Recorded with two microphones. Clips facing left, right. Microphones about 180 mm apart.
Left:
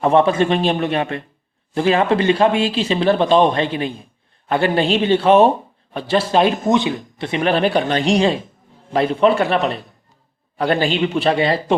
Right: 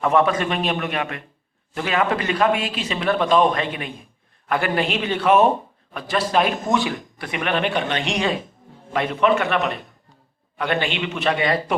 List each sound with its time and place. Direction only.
0.0 s a man's voice: 30° left (ahead or behind)